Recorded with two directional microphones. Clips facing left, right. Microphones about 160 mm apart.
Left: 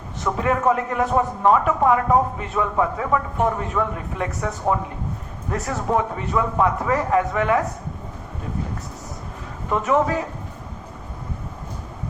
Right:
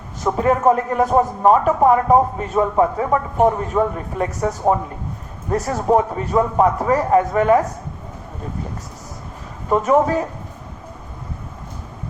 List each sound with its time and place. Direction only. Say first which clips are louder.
0.3 s a man's voice: right 4 dB; 35° right (ahead or behind)
9.6 s a man's voice: right 4 dB; 40° right (ahead or behind)